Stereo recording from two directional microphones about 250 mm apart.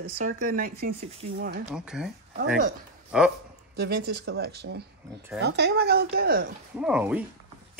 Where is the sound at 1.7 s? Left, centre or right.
Centre.